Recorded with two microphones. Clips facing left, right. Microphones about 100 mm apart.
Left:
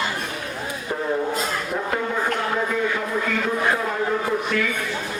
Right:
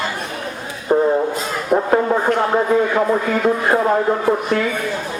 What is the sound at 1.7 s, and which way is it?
Speech, 50° right (ahead or behind).